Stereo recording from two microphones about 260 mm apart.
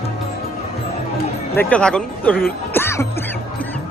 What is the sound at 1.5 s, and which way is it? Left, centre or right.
Speech, centre.